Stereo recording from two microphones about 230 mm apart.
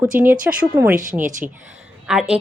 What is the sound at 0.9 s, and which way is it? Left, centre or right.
Speech, right.